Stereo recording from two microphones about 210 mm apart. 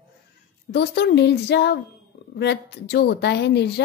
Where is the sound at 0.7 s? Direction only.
50° left (ahead or behind).